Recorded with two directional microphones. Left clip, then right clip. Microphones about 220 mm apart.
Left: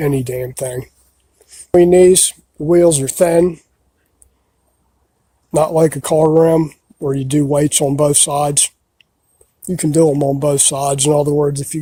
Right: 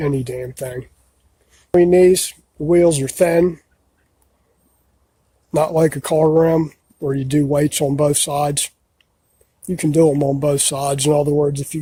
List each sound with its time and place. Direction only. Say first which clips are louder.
0.0 s speech: left 4 dB; 30° left (ahead or behind)
5.5 s speech: left 3 dB; 20° left (ahead or behind)